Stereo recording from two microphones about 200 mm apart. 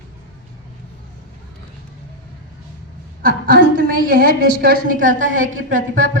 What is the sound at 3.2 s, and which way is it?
A woman's voice, 45° right (ahead or behind).